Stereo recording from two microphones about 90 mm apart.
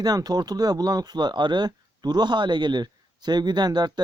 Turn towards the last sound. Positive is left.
turn(degrees=-50)  # may be behind; listen again after turning